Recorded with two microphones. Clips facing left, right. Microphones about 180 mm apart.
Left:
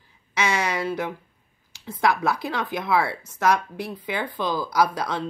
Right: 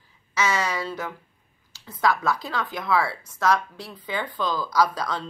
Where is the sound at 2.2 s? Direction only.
10° left (ahead or behind).